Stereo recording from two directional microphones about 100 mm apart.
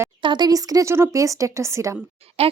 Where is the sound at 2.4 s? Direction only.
85° right.